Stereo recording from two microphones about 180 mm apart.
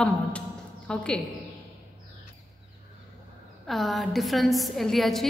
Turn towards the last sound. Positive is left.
turn(degrees=0)  # may be behind; listen again after turning